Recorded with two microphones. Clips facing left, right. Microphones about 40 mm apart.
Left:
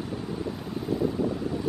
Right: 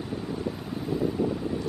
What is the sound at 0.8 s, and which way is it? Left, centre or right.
Boat, centre.